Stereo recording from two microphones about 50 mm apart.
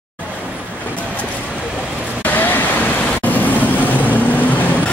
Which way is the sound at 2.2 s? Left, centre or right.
Left.